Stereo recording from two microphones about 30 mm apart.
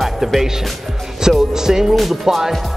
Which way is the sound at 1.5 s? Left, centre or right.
Centre.